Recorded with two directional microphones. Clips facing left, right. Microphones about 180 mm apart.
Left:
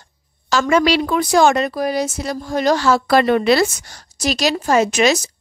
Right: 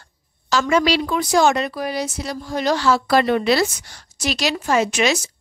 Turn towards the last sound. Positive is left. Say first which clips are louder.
# left 4 dB
turn(degrees=40)  # may be behind; listen again after turning